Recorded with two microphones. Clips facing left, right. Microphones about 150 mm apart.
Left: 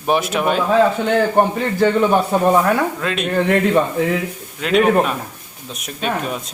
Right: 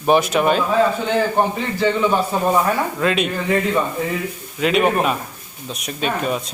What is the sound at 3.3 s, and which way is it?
Speech, 65° left (ahead or behind).